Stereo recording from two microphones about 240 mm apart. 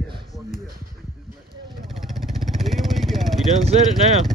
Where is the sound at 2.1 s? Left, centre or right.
Centre.